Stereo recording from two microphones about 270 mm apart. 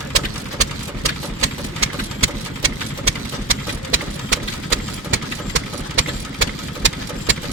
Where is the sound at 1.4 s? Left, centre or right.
Right.